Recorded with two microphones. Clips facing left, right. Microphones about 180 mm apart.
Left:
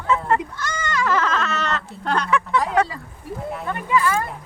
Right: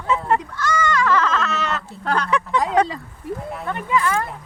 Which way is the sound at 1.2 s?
Centre (ahead or behind).